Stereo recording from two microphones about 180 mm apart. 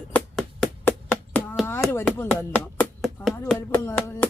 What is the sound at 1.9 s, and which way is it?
Speech, 10° left (ahead or behind).